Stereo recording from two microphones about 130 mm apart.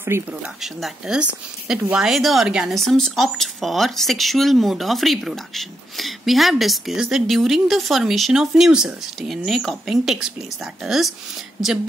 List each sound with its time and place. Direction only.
0.1 s speech: 20° right (ahead or behind)
0.6 s speech: centre (ahead or behind)